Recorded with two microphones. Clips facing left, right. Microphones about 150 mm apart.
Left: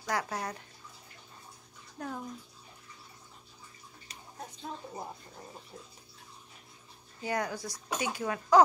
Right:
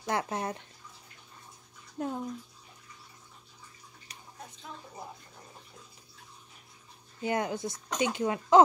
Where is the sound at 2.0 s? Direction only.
20° right (ahead or behind).